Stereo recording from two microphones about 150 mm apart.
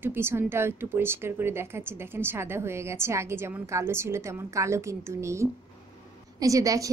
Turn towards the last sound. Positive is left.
turn(degrees=-20)  # may be behind; listen again after turning